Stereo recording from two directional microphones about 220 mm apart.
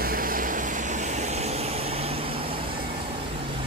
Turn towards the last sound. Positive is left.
turn(degrees=-25)  # may be behind; listen again after turning